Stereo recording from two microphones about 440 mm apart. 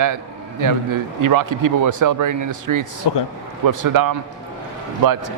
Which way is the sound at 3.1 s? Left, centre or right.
Left.